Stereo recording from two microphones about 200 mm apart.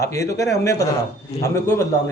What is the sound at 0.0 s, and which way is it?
A man's voice, 15° left (ahead or behind).